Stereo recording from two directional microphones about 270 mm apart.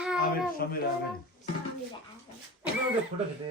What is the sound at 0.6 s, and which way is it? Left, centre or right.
Speech, left.